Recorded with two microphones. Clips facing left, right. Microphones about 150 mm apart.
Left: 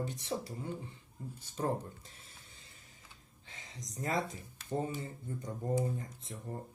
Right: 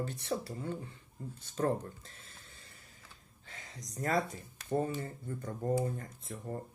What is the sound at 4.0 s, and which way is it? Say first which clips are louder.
Speech: right 3 dB; 20° left (ahead or behind).